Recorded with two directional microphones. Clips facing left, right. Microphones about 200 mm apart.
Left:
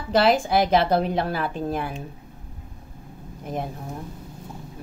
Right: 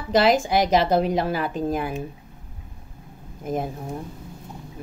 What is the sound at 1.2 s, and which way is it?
Speech, 10° right (ahead or behind).